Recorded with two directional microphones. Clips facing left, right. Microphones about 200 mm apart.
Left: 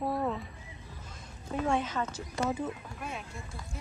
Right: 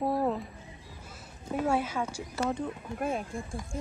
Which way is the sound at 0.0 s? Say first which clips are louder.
Right 3 dB; 25° right (ahead or behind).